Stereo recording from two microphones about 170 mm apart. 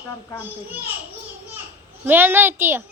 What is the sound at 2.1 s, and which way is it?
Speech, 10° right (ahead or behind).